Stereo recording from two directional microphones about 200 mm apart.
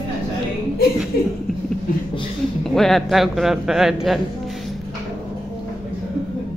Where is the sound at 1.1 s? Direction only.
50° left (ahead or behind).